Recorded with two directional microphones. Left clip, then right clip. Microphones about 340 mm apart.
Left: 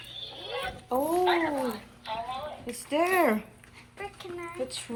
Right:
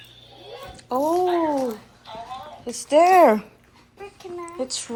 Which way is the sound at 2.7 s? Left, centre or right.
Centre.